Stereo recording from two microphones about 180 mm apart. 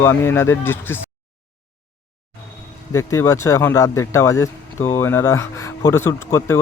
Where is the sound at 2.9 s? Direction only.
15° left (ahead or behind).